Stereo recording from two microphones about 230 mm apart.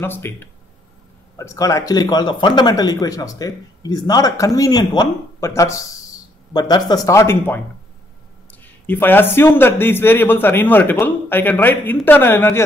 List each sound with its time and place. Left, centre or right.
0.0 s speech: centre